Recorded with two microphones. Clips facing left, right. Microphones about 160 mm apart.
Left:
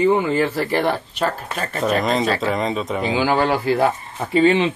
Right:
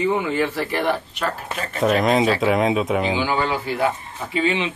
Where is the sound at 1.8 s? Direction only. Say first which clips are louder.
Right 2 dB; 5° right (ahead or behind).